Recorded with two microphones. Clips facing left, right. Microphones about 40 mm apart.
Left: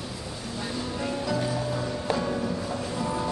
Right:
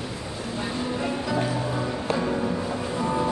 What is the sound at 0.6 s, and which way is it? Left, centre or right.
Music, centre.